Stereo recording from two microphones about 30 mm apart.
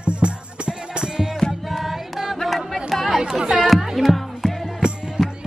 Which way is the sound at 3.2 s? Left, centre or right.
Centre.